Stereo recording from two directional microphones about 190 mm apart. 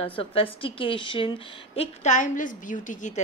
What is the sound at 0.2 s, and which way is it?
A woman's voice, 30° left (ahead or behind).